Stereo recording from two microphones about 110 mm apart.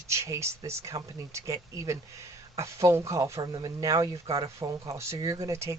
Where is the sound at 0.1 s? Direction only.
25° right (ahead or behind).